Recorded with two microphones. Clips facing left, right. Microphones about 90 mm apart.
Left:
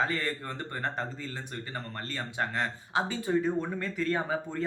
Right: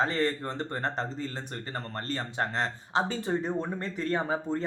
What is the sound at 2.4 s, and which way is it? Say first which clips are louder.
A man's voice: even; 35° right (ahead or behind).